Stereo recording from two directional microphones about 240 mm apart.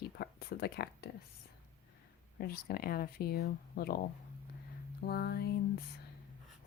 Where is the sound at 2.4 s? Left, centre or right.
Left.